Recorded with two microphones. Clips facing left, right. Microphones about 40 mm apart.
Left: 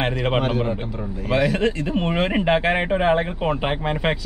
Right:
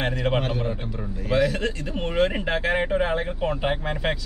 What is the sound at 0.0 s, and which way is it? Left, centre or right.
Speech, left.